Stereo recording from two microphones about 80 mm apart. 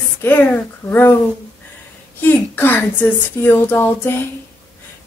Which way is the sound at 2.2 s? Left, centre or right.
Left.